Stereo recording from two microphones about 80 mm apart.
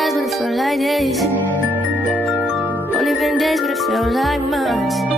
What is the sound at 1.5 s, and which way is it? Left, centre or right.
Music, right.